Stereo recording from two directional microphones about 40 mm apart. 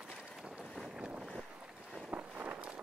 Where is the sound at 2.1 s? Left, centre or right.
Right.